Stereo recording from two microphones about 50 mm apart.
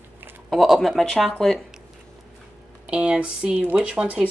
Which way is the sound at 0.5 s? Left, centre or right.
Centre.